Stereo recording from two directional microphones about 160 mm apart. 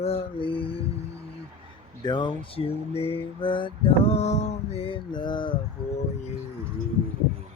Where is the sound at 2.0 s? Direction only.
25° left (ahead or behind).